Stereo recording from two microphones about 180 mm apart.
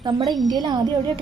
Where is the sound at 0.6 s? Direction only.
25° right (ahead or behind).